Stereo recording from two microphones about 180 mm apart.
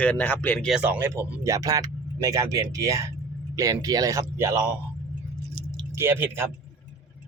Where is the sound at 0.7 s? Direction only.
5° right (ahead or behind).